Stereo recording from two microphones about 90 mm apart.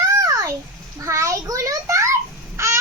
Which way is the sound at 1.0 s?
35° right (ahead or behind).